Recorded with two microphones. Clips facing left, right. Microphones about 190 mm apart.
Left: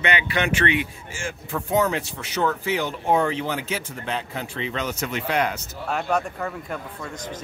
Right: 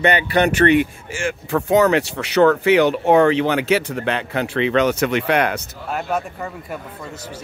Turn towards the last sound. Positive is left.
turn(degrees=-5)  # may be behind; listen again after turning